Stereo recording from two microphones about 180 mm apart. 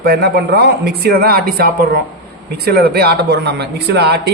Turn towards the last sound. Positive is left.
turn(degrees=-65)  # may be behind; listen again after turning